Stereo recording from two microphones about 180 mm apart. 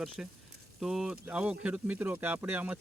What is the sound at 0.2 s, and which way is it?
Speech, 5° right (ahead or behind).